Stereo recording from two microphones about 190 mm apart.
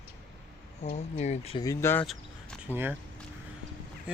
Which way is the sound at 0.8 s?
35° left (ahead or behind).